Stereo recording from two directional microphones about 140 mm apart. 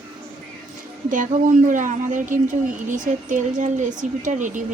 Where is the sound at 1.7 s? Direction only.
65° right (ahead or behind).